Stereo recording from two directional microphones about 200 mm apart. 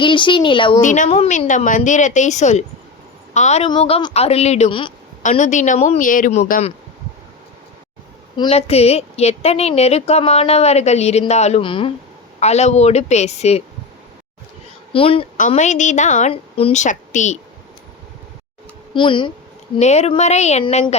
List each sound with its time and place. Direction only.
0.0 s a woman's voice: 25° left (ahead or behind)
0.8 s a woman's voice: 40° left (ahead or behind)
5.2 s a woman's voice: 35° left (ahead or behind)
8.4 s a woman's voice: 30° left (ahead or behind)
14.9 s a woman's voice: 25° left (ahead or behind)
18.9 s a woman's voice: 25° left (ahead or behind)